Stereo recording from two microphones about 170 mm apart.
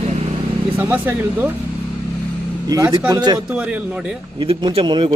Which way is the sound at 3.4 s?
10° right (ahead or behind).